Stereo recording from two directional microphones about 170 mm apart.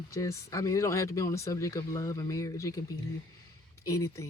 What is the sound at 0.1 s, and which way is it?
Speech, 20° left (ahead or behind).